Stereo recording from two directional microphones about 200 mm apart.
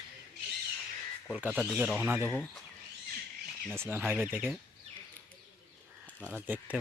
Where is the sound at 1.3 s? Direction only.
5° right (ahead or behind).